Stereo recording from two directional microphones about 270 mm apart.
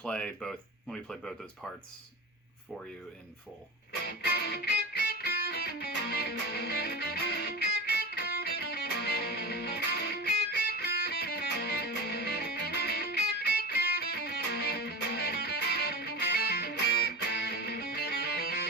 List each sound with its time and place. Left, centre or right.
0.0 s speech: centre
4.2 s music: left